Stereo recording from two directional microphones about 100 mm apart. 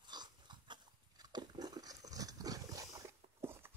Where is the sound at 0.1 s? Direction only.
45° right (ahead or behind).